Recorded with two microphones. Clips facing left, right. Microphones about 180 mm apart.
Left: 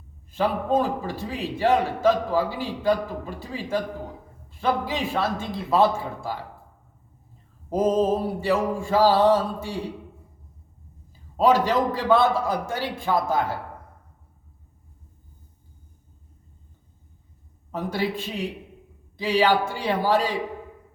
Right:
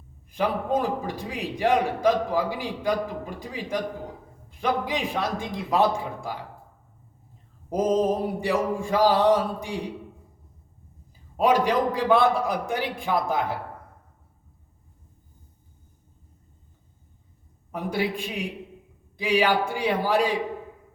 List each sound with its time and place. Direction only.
0.3 s a man's voice: 15° right (ahead or behind)
7.7 s a man's voice: 15° right (ahead or behind)
11.3 s a man's voice: 15° right (ahead or behind)
17.9 s a man's voice: 15° right (ahead or behind)